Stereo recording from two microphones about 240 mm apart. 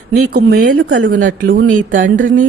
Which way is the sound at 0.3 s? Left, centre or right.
Right.